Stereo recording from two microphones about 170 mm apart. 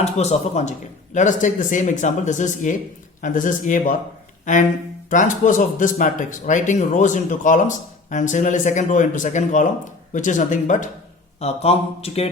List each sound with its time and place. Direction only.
0.0 s speech: 40° left (ahead or behind)
5.0 s speech: 50° left (ahead or behind)
11.3 s speech: 35° left (ahead or behind)